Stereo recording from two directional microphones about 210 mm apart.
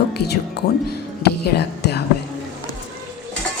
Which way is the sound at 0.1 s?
50° left (ahead or behind).